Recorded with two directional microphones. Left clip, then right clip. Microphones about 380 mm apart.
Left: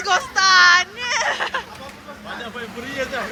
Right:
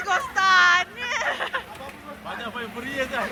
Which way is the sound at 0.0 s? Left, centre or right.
Centre.